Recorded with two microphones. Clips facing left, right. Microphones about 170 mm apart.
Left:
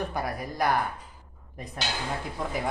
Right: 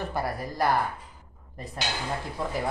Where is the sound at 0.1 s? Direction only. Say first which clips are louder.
Right 1 dB; centre (ahead or behind).